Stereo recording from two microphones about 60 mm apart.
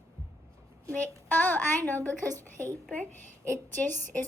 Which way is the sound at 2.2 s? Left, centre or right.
Right.